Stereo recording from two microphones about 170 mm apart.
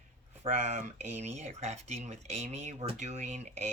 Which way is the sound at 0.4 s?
45° right (ahead or behind).